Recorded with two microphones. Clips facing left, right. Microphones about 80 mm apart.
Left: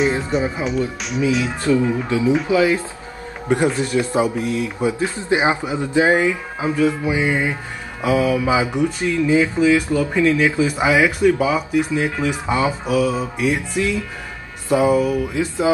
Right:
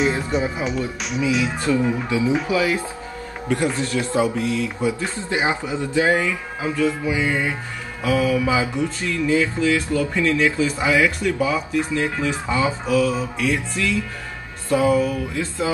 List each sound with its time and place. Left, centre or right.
0.3 s speech: centre
1.7 s speech: left